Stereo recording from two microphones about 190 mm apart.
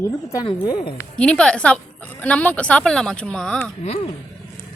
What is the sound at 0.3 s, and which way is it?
Speech, 20° left (ahead or behind).